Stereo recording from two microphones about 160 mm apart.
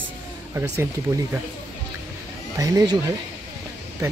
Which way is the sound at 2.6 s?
25° right (ahead or behind).